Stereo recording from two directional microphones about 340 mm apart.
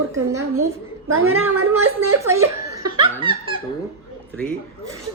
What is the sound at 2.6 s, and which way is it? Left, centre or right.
Laughter, centre.